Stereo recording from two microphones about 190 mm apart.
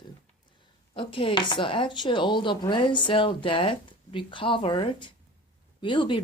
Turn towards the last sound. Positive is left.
turn(degrees=25)  # may be behind; listen again after turning